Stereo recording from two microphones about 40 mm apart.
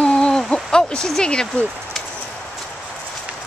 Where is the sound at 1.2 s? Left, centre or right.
Left.